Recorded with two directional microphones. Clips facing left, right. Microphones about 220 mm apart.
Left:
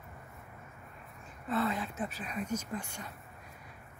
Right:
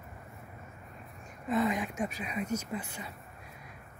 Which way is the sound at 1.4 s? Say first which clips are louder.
Right 3 dB; 15° right (ahead or behind).